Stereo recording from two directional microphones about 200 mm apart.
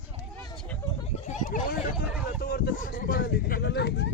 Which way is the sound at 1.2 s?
40° left (ahead or behind).